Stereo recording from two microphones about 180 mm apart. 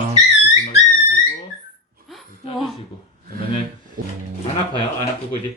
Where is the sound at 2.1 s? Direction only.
Centre (ahead or behind).